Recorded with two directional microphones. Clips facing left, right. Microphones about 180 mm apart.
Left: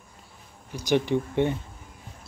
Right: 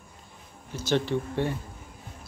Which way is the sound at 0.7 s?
15° left (ahead or behind).